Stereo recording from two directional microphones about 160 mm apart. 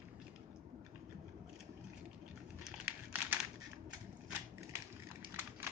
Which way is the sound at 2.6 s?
10° right (ahead or behind).